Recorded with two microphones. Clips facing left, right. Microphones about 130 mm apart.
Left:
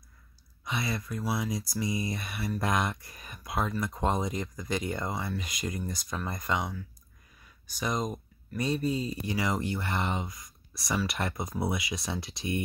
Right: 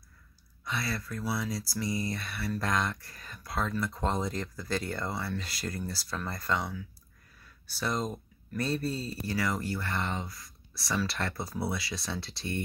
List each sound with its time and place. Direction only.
0.7 s speech: 20° left (ahead or behind)